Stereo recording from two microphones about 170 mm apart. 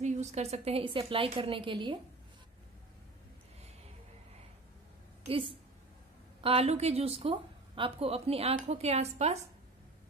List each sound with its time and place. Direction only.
0.0 s a woman's voice: 40° right (ahead or behind)
5.2 s a woman's voice: 30° right (ahead or behind)